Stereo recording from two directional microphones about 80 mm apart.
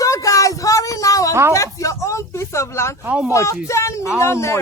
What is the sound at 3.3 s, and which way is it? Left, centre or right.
Speech, left.